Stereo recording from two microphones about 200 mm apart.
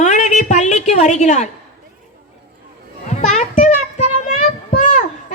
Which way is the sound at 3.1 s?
35° left (ahead or behind).